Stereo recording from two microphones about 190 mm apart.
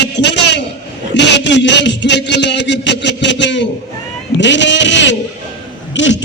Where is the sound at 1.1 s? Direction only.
70° left (ahead or behind).